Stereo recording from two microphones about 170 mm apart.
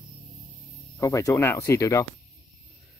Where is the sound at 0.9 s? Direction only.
20° left (ahead or behind).